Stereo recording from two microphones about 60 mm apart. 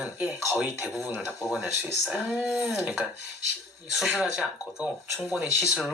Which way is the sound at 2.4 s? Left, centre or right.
Centre.